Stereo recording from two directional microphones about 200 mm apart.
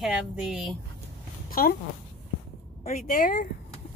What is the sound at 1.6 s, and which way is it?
Speech, 45° left (ahead or behind).